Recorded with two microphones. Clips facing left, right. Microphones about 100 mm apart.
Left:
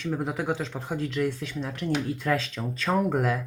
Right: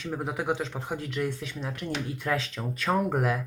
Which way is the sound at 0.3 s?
20° right (ahead or behind).